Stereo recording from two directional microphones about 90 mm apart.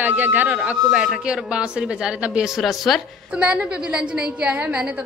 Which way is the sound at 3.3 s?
10° right (ahead or behind).